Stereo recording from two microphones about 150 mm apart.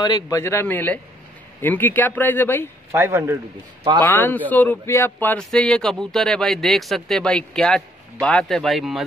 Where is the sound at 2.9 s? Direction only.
15° right (ahead or behind).